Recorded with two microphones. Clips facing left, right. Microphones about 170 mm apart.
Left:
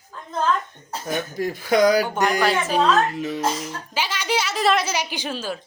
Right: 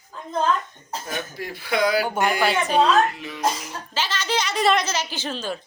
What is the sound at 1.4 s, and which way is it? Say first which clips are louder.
Speech: left 6 dB; 45° left (ahead or behind).